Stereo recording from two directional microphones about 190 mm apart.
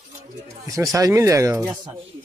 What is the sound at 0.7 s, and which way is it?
Speech, 15° right (ahead or behind).